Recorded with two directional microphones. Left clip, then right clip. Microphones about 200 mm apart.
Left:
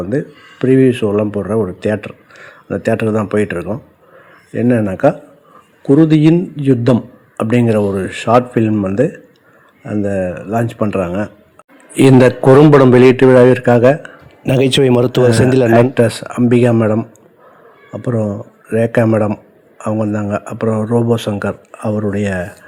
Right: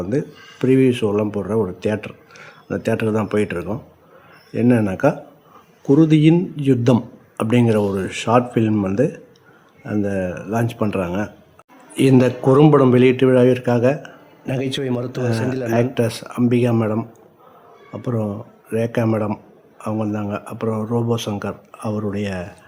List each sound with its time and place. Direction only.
0.1 s speech: 10° left (ahead or behind)
11.9 s speech: 25° left (ahead or behind)
14.4 s a man's voice: 40° left (ahead or behind)
15.6 s speech: 20° left (ahead or behind)